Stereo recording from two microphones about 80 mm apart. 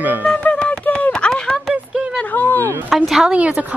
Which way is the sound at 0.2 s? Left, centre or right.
Centre.